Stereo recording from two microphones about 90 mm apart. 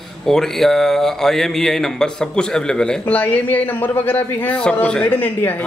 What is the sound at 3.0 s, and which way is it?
A man's voice, 20° left (ahead or behind).